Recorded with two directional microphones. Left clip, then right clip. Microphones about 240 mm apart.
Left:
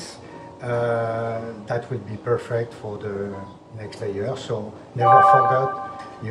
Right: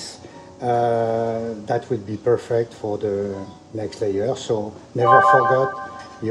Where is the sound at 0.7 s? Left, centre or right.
Right.